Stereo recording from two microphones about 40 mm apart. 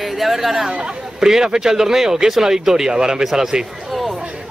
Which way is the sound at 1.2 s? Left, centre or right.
Centre.